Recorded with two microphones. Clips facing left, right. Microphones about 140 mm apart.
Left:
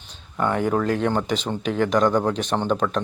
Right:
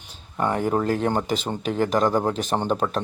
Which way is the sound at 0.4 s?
35° right (ahead or behind).